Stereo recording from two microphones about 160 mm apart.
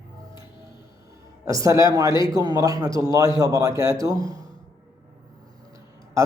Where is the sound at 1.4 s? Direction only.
20° right (ahead or behind).